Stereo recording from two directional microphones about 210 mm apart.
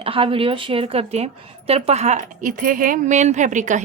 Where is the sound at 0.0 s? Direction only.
25° right (ahead or behind).